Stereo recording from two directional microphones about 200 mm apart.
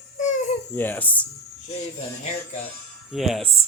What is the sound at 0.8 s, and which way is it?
Speech, 10° left (ahead or behind).